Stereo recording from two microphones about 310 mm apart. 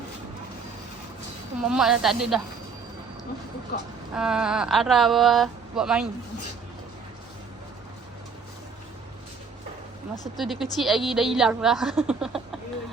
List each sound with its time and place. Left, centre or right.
1.6 s a woman's voice: centre
3.7 s speech: left
4.1 s a woman's voice: centre
10.3 s a woman's voice: centre